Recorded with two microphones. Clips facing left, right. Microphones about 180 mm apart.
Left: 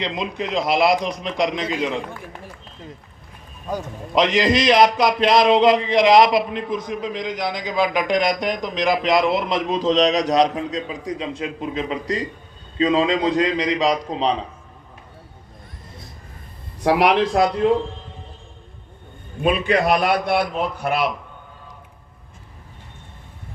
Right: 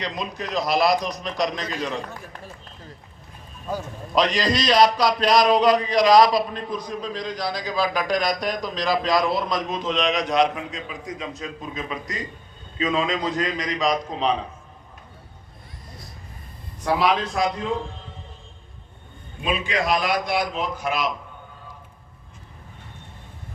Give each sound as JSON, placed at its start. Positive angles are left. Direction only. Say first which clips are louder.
{"t": 0.0, "sound": "a man's voice", "louder": "left 4 dB", "side_deg": 25}
{"t": 16.8, "sound": "speech", "louder": "left 5 dB", "side_deg": 75}
{"t": 19.4, "sound": "a man's voice", "louder": "left 6 dB", "side_deg": 60}